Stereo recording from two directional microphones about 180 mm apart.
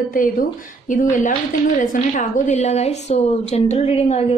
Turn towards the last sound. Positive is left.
turn(degrees=35)  # may be behind; listen again after turning